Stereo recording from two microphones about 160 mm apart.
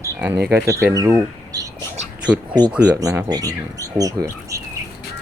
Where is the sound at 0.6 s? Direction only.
20° right (ahead or behind).